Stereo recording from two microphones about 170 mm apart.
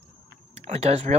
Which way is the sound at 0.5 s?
40° right (ahead or behind).